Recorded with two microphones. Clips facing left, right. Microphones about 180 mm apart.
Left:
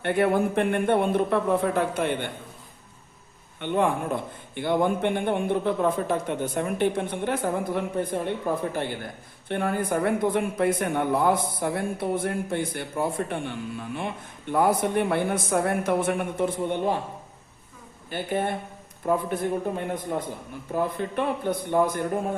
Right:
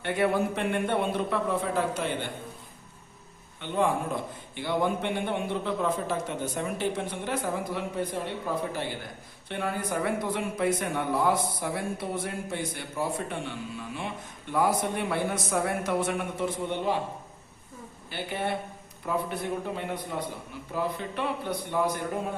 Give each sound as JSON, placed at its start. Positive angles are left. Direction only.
{"t": 0.0, "sound": "a man's voice", "side_deg": 55}
{"t": 3.6, "sound": "a man's voice", "side_deg": 60}
{"t": 18.1, "sound": "a man's voice", "side_deg": 50}